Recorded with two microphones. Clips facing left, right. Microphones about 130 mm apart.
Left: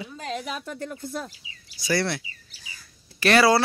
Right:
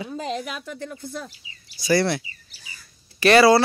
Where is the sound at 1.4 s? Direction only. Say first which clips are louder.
Even; 90° left.